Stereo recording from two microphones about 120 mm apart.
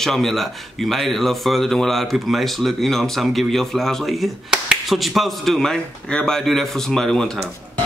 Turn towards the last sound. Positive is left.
turn(degrees=5)  # may be behind; listen again after turning